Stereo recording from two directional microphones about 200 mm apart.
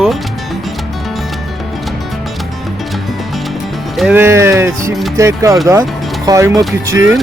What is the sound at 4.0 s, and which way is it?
Speech, 10° right (ahead or behind).